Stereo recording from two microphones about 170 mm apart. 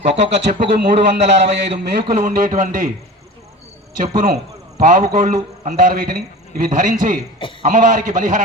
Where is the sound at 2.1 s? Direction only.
50° right (ahead or behind).